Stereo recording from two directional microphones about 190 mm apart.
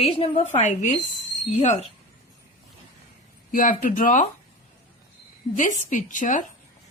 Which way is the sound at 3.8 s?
45° left (ahead or behind).